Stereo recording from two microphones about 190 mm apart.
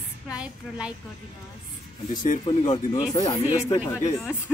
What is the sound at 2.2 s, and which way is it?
Speech, 40° left (ahead or behind).